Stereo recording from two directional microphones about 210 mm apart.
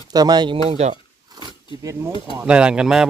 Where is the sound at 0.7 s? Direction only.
30° right (ahead or behind).